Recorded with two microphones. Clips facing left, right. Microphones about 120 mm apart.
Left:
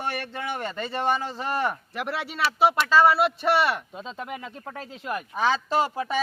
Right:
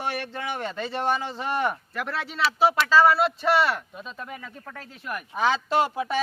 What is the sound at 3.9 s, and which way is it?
Speech, 25° left (ahead or behind).